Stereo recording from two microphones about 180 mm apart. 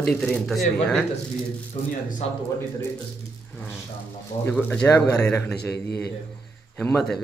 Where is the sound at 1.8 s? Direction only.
45° left (ahead or behind).